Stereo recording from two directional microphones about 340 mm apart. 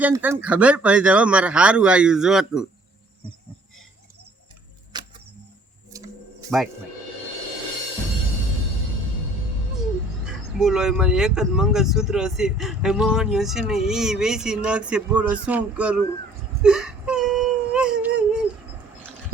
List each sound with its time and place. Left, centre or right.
0.0 s speech: centre
4.9 s a sound: centre
10.2 s speech: centre
16.6 s whimper: centre